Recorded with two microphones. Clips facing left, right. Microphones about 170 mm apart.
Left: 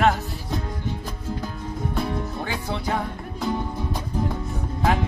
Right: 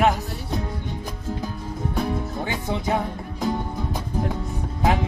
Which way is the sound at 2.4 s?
20° right (ahead or behind).